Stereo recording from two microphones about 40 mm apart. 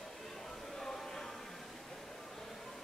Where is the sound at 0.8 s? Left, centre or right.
Centre.